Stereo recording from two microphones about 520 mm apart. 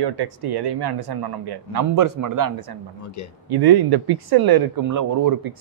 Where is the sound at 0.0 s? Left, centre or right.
Right.